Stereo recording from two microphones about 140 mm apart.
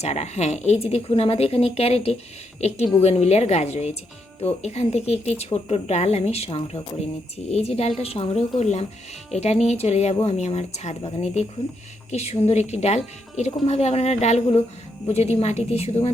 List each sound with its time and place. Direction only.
0.0 s speech: 50° left (ahead or behind)